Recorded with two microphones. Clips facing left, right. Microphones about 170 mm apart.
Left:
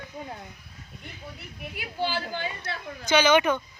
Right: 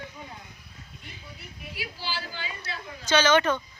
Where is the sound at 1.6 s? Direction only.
55° left (ahead or behind).